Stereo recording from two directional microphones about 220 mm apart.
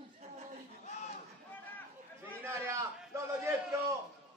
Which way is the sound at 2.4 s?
10° right (ahead or behind).